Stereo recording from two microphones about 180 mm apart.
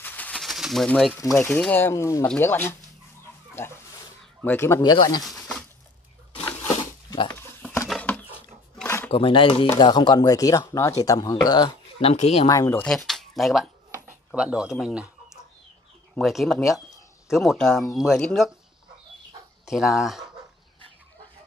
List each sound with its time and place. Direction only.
0.0 s bird: 10° left (ahead or behind)
1.4 s speech: 10° left (ahead or behind)
5.2 s a sound: centre (ahead or behind)
6.7 s a sound: 25° left (ahead or behind)
7.3 s a sound: 10° left (ahead or behind)
7.9 s roaring cats: 10° left (ahead or behind)
8.7 s a sound: 10° left (ahead or behind)
9.1 s speech: 30° left (ahead or behind)
12.0 s speech: 35° left (ahead or behind)
12.4 s speech: 15° left (ahead or behind)
12.8 s speech: 5° left (ahead or behind)
19.6 s speech: centre (ahead or behind)